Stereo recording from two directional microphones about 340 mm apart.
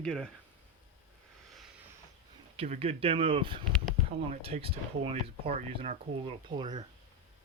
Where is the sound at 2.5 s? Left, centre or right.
Centre.